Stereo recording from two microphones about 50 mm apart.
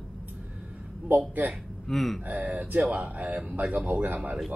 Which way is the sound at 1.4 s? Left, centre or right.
Right.